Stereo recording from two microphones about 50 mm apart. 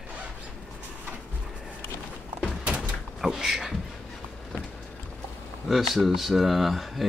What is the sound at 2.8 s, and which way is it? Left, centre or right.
Door, centre.